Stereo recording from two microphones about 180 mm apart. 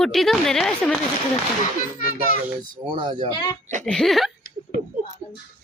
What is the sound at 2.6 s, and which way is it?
Speech, 25° right (ahead or behind).